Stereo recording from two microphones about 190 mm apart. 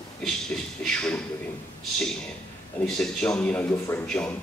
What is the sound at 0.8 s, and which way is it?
Speech, 5° left (ahead or behind).